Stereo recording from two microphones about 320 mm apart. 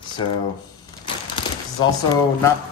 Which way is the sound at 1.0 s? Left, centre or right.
Centre.